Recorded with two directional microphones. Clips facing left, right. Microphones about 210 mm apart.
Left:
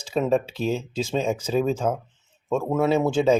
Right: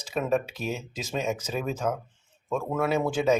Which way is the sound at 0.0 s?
30° left (ahead or behind).